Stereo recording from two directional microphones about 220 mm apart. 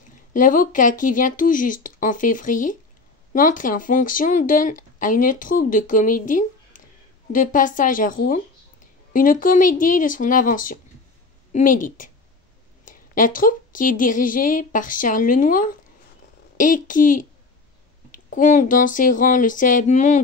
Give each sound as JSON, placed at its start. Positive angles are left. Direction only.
{"t": 0.3, "sound": "speech", "side_deg": 40}